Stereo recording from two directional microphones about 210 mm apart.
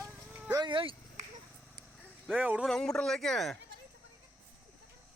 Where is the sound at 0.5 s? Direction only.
20° right (ahead or behind).